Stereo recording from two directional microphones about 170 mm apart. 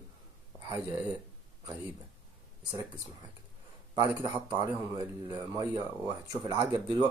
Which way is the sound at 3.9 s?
20° right (ahead or behind).